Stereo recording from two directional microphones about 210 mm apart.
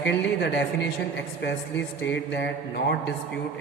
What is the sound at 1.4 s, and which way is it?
Mantra, 55° left (ahead or behind).